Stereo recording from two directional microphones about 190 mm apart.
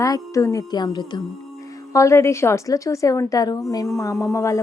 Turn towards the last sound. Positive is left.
turn(degrees=15)  # may be behind; listen again after turning